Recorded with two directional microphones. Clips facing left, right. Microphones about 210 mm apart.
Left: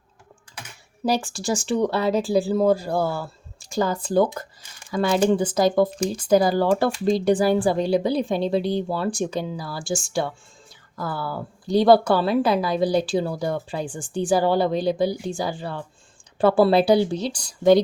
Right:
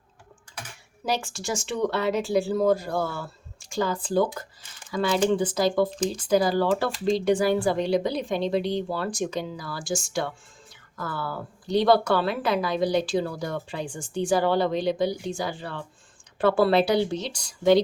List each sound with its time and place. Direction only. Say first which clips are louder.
1.0 s speech: left 5 dB; 35° left (ahead or behind)